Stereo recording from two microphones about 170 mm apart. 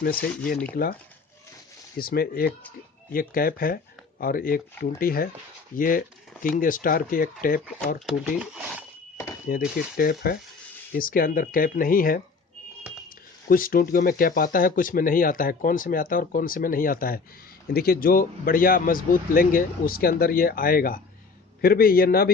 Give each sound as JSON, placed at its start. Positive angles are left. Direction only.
{"t": 0.0, "sound": "speech", "side_deg": 60}
{"t": 2.0, "sound": "speech", "side_deg": 60}
{"t": 8.0, "sound": "speech", "side_deg": -5}
{"t": 9.1, "sound": "a sound", "side_deg": 15}
{"t": 9.5, "sound": "speech", "side_deg": 60}